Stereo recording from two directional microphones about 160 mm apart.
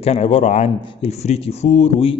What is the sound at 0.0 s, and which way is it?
Speech, 40° left (ahead or behind).